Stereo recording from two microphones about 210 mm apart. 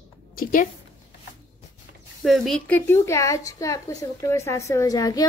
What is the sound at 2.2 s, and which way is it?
A woman's voice, centre (ahead or behind).